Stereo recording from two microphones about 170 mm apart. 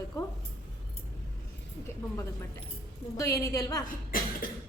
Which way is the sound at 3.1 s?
20° left (ahead or behind).